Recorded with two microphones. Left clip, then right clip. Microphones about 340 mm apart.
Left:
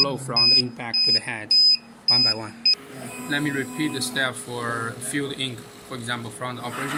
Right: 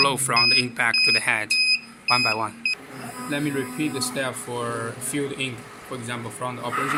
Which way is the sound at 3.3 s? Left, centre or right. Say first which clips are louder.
Left 2 dB; centre.